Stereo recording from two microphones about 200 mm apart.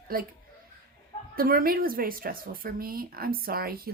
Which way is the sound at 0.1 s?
50° right (ahead or behind).